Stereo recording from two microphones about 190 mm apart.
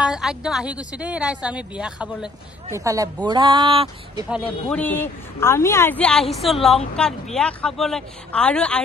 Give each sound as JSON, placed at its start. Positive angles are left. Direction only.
{"t": 0.0, "sound": "a woman's voice", "side_deg": -5}
{"t": 2.7, "sound": "speech", "side_deg": -15}
{"t": 4.6, "sound": "a woman's voice", "side_deg": 10}